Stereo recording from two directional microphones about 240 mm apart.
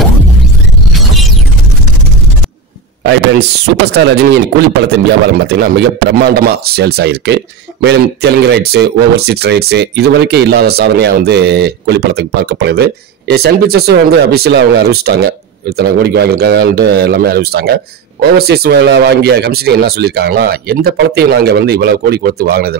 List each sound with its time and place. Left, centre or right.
3.1 s speech: right